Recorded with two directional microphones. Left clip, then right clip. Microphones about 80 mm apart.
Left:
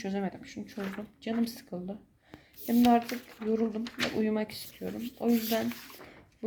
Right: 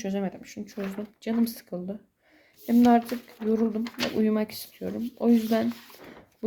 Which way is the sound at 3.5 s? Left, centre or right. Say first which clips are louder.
Right 4 dB; right.